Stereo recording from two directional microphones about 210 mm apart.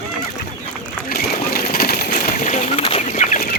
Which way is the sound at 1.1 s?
45° left (ahead or behind).